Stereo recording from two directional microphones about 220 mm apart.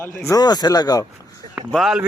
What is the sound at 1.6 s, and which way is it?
Speech, centre (ahead or behind).